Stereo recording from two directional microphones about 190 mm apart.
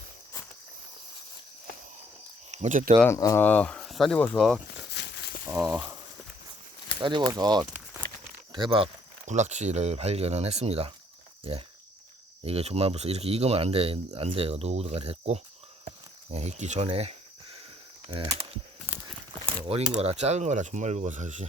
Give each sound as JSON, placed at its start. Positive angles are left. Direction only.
{"t": 2.5, "sound": "speech", "side_deg": -40}
{"t": 3.0, "sound": "speech", "side_deg": 15}
{"t": 4.9, "sound": "a sound", "side_deg": 60}
{"t": 5.5, "sound": "speech", "side_deg": -15}
{"t": 7.0, "sound": "speech", "side_deg": -25}
{"t": 7.6, "sound": "a sound", "side_deg": -10}
{"t": 8.5, "sound": "speech", "side_deg": -25}
{"t": 19.6, "sound": "speech", "side_deg": -30}